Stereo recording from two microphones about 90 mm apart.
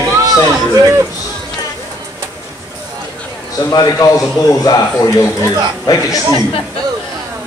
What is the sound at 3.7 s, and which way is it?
A man's voice, 45° left (ahead or behind).